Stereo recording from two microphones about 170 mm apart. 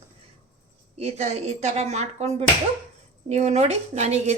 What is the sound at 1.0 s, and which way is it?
A woman's voice, 40° right (ahead or behind).